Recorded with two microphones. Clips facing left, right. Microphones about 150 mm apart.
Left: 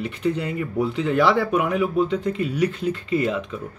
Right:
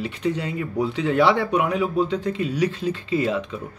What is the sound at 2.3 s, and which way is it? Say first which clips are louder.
Speech: even; 50° left (ahead or behind).